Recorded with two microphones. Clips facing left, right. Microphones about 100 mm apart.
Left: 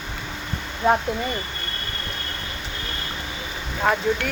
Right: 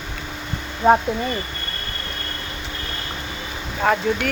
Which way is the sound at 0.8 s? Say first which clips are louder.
Right 4 dB; 30° right (ahead or behind).